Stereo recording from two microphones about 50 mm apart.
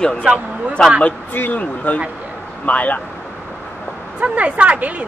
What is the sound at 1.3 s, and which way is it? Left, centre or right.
Speech, left.